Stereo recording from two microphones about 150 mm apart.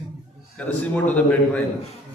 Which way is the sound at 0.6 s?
10° left (ahead or behind).